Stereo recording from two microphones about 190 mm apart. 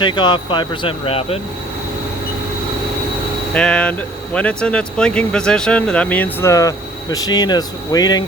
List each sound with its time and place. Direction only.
0.0 s speech: 25° left (ahead or behind)
3.5 s speech: 5° left (ahead or behind); by 8.2 s 20° left (ahead or behind)